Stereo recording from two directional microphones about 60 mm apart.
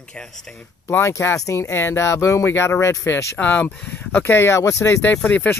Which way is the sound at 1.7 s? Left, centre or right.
Left.